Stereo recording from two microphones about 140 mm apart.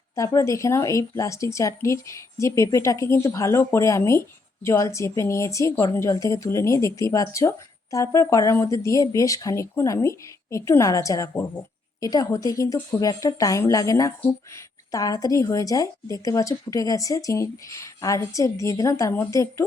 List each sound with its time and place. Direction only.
0.2 s a woman's voice: 20° left (ahead or behind)